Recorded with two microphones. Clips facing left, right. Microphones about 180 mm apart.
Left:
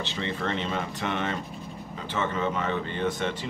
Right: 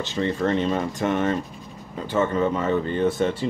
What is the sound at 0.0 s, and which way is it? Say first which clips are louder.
Speech: right 7 dB; 45° right (ahead or behind).